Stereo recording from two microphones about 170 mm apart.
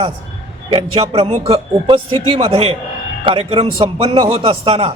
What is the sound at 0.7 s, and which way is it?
A man's voice, 35° right (ahead or behind).